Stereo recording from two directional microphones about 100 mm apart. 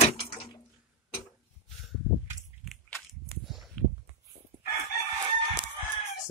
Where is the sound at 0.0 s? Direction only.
70° left (ahead or behind).